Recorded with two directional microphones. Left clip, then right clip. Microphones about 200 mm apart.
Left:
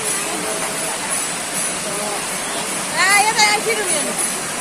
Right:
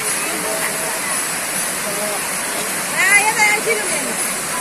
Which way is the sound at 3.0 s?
25° left (ahead or behind).